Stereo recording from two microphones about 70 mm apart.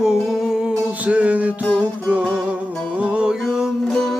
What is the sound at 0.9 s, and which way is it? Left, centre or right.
Music, right.